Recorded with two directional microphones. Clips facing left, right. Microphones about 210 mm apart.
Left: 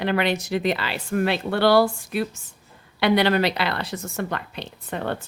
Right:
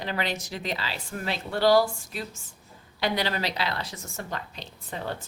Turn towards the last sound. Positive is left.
turn(degrees=65)  # may be behind; listen again after turning